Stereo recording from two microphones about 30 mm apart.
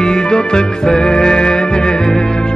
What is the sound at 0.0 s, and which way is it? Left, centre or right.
Music, left.